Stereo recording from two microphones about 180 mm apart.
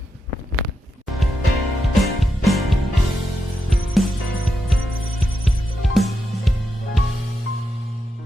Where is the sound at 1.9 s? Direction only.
Centre (ahead or behind).